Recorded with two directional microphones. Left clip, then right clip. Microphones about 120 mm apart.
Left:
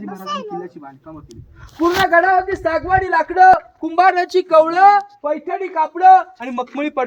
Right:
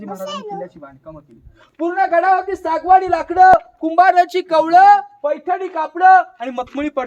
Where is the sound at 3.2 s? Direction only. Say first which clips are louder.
Even; 35° right (ahead or behind).